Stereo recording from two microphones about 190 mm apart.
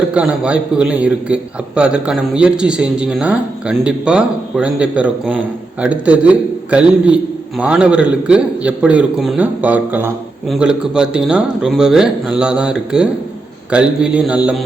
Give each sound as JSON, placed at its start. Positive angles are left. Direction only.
{"t": 0.1, "sound": "a man's voice", "side_deg": -5}